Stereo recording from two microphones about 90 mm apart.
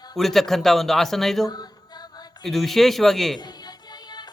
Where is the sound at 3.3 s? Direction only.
50° left (ahead or behind).